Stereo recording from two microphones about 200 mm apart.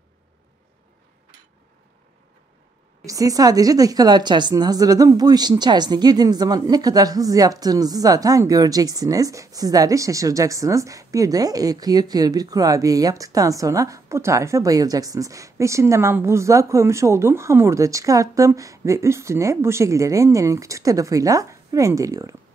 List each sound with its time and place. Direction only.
3.1 s a woman's voice: 15° right (ahead or behind)